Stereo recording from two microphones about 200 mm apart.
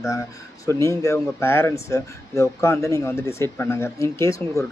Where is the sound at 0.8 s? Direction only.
15° left (ahead or behind).